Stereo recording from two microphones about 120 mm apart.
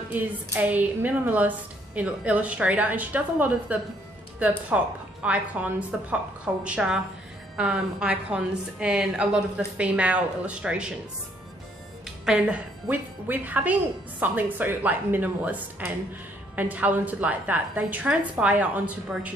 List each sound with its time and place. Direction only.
0.1 s speech: 15° right (ahead or behind)
12.3 s speech: 10° right (ahead or behind)